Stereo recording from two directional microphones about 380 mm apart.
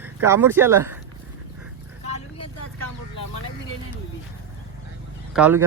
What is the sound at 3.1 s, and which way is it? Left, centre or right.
Vehicle, left.